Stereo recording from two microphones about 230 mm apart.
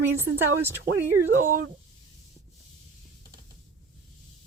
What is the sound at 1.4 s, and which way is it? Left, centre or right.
Speech, right.